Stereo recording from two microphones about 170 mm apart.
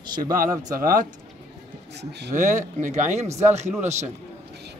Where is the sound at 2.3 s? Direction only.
50° right (ahead or behind).